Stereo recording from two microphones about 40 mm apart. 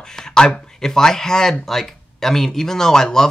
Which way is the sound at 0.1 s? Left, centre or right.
Centre.